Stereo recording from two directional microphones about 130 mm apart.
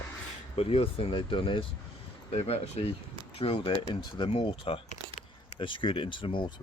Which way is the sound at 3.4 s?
40° left (ahead or behind).